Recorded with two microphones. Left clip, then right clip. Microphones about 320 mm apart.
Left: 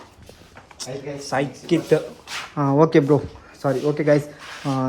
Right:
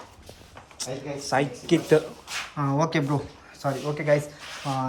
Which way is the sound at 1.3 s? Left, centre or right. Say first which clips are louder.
Left 1 dB; centre.